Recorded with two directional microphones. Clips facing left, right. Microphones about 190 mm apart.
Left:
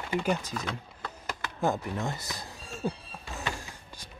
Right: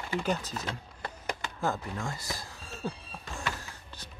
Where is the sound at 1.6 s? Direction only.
20° left (ahead or behind).